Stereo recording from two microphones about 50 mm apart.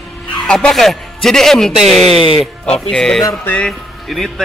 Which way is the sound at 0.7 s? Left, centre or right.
Centre.